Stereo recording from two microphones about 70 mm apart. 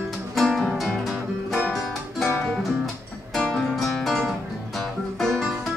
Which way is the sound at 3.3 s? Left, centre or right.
Centre.